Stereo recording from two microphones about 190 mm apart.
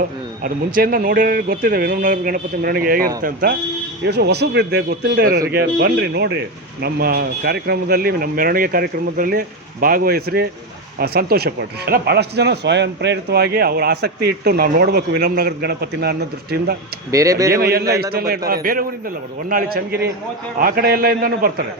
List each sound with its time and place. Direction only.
0.4 s speech: 50° right (ahead or behind)
4.0 s speech: 60° right (ahead or behind)
17.1 s speech: 15° right (ahead or behind)
17.6 s speech: 55° right (ahead or behind)